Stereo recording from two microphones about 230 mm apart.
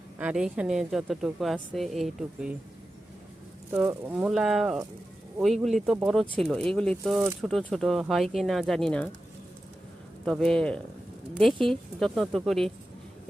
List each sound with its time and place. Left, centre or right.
0.2 s a woman's voice: centre
3.7 s a woman's voice: centre
10.2 s a woman's voice: centre